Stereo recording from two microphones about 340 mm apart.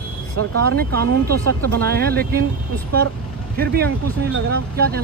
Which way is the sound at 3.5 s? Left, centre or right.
Right.